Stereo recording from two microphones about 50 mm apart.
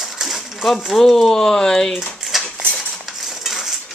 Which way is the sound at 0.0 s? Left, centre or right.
Centre.